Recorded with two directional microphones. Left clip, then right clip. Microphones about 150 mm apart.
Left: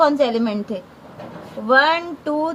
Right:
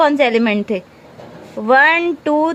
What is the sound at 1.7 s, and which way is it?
Speech, 35° right (ahead or behind).